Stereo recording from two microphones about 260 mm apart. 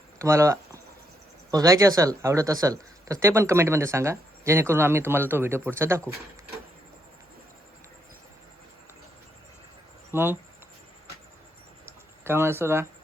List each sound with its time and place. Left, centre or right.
0.2 s speech: centre
10.1 s speech: centre
11.9 s a sound: centre